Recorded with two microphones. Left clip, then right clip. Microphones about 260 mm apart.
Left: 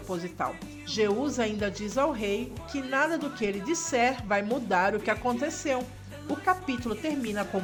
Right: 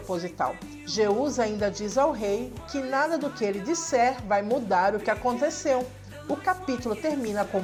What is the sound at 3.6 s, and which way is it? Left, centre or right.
Speech, left.